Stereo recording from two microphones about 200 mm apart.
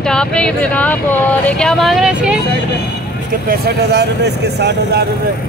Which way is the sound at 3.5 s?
55° right (ahead or behind).